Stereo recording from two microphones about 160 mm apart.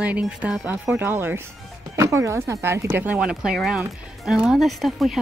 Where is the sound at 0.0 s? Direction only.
10° right (ahead or behind).